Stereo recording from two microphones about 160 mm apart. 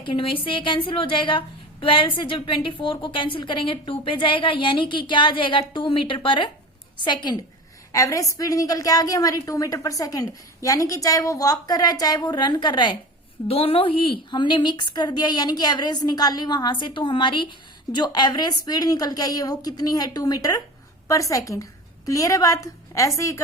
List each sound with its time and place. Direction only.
0.0 s a woman's voice: 35° left (ahead or behind)